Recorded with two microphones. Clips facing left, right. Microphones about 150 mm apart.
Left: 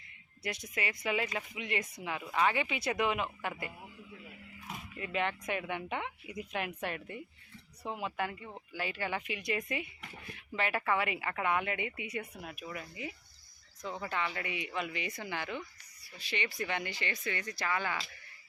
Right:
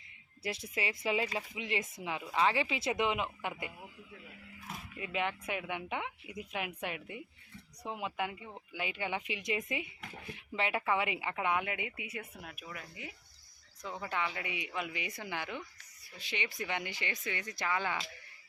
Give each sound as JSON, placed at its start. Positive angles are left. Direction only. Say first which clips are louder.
{"t": 0.4, "sound": "speech", "louder": "right 1 dB", "side_deg": -30}
{"t": 4.9, "sound": "speech", "louder": "left 1 dB", "side_deg": -10}